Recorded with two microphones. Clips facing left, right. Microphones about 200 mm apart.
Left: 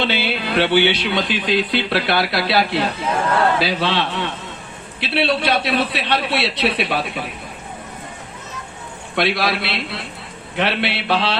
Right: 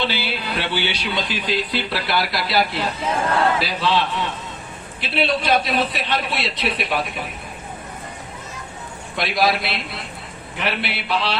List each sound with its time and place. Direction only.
0.0 s a man's voice: 60° left (ahead or behind)
9.1 s speech: 65° left (ahead or behind)